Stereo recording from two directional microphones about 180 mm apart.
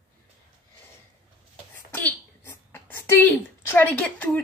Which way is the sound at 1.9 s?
10° left (ahead or behind).